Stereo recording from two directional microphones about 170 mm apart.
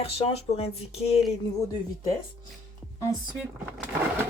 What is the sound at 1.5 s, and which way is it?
Speech, 20° left (ahead or behind).